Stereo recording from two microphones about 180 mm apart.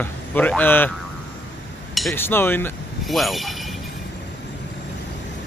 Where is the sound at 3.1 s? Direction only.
Centre (ahead or behind).